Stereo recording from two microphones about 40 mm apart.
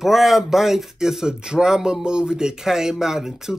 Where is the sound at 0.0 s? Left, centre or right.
Centre.